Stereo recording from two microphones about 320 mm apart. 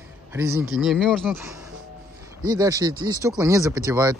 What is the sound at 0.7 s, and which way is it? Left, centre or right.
Speech, centre.